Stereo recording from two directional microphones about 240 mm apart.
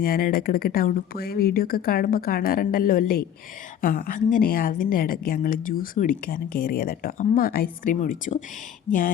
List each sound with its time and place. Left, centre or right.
0.0 s a woman's voice: left